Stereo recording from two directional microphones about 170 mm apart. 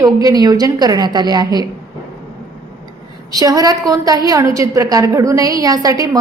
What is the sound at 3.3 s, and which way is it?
A woman's voice, 20° right (ahead or behind).